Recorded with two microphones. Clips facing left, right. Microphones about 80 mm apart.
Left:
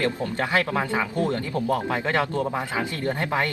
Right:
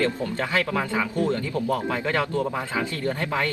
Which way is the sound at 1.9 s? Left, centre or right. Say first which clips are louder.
Left 1 dB; left.